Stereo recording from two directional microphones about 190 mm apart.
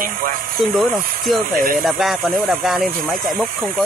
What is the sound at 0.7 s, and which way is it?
Speech, centre (ahead or behind).